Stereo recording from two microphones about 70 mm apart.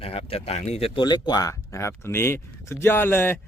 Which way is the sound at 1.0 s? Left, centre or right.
Left.